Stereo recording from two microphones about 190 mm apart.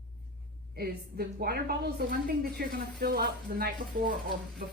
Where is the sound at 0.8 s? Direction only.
55° right (ahead or behind).